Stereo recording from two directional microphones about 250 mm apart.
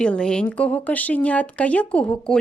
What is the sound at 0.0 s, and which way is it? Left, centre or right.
Speech, centre.